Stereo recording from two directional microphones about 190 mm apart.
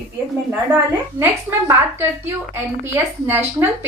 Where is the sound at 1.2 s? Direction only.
10° right (ahead or behind).